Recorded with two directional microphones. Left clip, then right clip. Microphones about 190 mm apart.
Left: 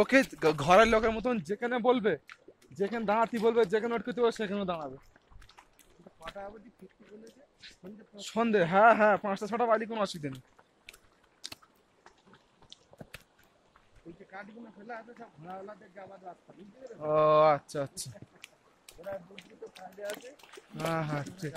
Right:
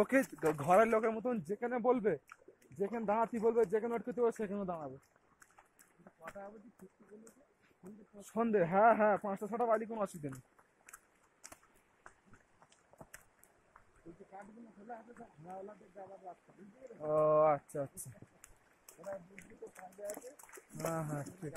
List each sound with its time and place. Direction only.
0.0 s speech: 15° left (ahead or behind)
8.2 s speech: 10° left (ahead or behind)
14.3 s speech: 10° right (ahead or behind)
17.0 s speech: 10° left (ahead or behind)
20.2 s speech: centre (ahead or behind)
20.9 s speech: 15° left (ahead or behind)